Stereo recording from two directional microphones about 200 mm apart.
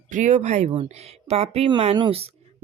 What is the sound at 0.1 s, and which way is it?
Speech, 35° right (ahead or behind).